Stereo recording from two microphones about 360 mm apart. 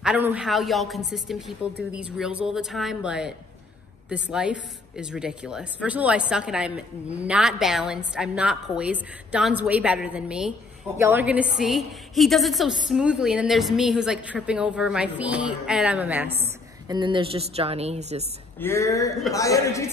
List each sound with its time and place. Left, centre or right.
0.0 s a woman's voice: centre
18.6 s speech: centre